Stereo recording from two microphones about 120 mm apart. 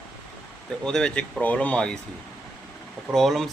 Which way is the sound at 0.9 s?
5° left (ahead or behind).